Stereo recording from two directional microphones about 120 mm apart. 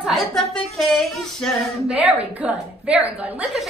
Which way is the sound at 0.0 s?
Centre (ahead or behind).